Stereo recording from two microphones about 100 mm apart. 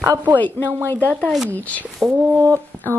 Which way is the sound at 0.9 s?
15° left (ahead or behind).